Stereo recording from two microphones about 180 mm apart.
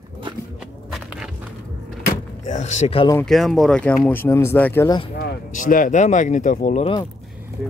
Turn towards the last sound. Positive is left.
turn(degrees=-5)  # may be behind; listen again after turning